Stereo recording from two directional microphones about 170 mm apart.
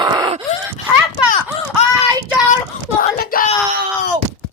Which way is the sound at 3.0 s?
60° left (ahead or behind).